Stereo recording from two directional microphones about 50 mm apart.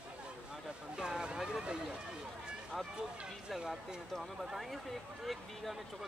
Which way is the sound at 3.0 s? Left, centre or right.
Centre.